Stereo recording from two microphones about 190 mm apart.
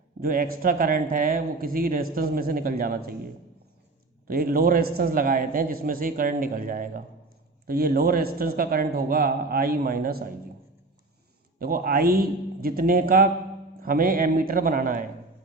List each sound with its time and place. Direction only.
0.2 s speech: 50° right (ahead or behind)
4.3 s speech: 50° right (ahead or behind)
11.6 s speech: 50° right (ahead or behind)